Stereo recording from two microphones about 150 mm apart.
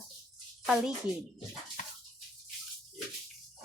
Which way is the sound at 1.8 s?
55° left (ahead or behind).